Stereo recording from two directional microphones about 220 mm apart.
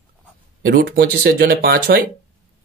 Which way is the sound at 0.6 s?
45° right (ahead or behind).